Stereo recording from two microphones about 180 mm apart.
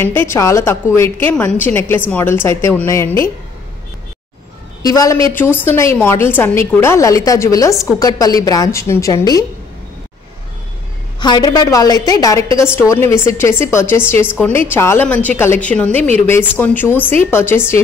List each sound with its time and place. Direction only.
0.0 s a woman's voice: 10° left (ahead or behind)
4.8 s a woman's voice: 20° left (ahead or behind)
11.1 s a woman's voice: 25° left (ahead or behind); by 15.9 s 10° left (ahead or behind)
15.9 s speech: 35° right (ahead or behind)
16.3 s a woman's voice: 10° left (ahead or behind)